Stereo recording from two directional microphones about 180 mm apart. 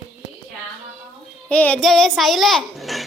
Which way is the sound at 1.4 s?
5° left (ahead or behind).